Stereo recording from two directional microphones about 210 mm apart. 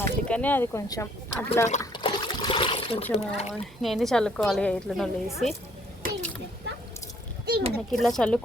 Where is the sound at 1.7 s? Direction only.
25° left (ahead or behind).